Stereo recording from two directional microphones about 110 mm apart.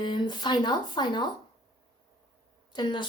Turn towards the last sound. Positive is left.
turn(degrees=45)  # may be behind; listen again after turning